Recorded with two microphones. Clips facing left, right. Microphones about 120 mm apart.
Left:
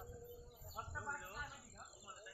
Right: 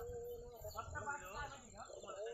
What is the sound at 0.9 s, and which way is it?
Speech, 25° right (ahead or behind).